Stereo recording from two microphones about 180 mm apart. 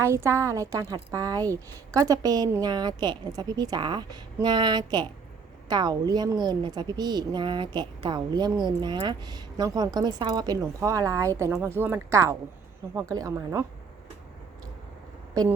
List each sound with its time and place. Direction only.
0.0 s a woman's voice: 15° right (ahead or behind)